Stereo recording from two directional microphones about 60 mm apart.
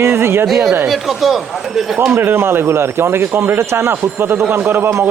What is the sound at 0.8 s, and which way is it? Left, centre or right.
Speech, centre.